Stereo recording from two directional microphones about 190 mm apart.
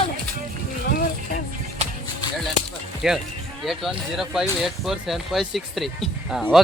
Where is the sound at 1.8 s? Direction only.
35° right (ahead or behind).